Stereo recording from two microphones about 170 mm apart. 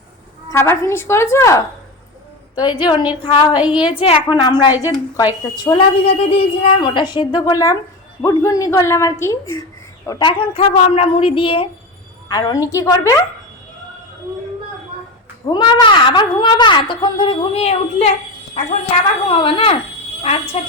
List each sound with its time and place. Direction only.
0.5 s a woman's voice: 15° left (ahead or behind)
2.6 s a woman's voice: 30° left (ahead or behind)
3.5 s a woman's voice: 5° right (ahead or behind)
4.0 s a woman's voice: 30° left (ahead or behind)
10.1 s a woman's voice: 25° left (ahead or behind)
15.5 s a woman's voice: 30° left (ahead or behind)
19.3 s a woman's voice: 30° left (ahead or behind)